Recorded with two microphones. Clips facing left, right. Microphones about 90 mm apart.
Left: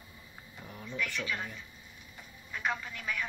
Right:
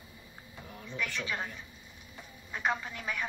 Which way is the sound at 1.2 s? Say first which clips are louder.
Right 1 dB; 25° right (ahead or behind).